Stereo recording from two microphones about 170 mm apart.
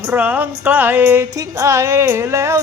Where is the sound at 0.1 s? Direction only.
10° right (ahead or behind).